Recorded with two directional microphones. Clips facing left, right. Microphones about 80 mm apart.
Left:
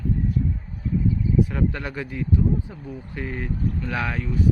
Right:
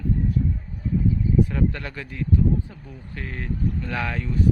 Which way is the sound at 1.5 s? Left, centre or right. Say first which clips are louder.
Even; centre.